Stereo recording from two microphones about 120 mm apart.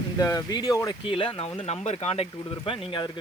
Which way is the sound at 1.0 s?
50° left (ahead or behind).